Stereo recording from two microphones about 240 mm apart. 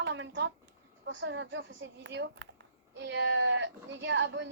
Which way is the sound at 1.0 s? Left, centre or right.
Right.